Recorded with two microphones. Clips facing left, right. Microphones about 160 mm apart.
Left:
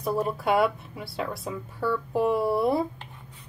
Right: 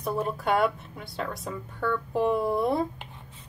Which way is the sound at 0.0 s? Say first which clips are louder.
Left 2 dB; 5° left (ahead or behind).